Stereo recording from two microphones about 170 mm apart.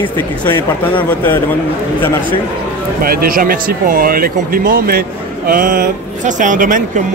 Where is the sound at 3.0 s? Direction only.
60° right (ahead or behind).